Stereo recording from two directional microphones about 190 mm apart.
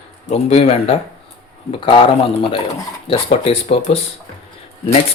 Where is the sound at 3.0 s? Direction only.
30° left (ahead or behind).